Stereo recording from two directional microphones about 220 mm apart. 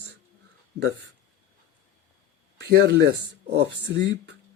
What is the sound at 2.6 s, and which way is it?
Speech, 50° right (ahead or behind).